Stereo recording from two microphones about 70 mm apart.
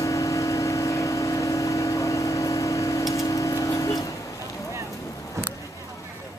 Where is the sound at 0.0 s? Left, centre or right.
Left.